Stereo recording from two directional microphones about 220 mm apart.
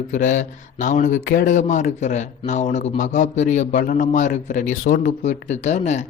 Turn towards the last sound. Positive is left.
turn(degrees=30)  # may be behind; listen again after turning